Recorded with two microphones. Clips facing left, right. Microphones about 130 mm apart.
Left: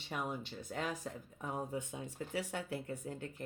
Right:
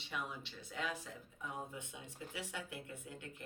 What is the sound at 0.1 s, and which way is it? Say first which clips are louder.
Speech: left 5 dB; 45° left (ahead or behind).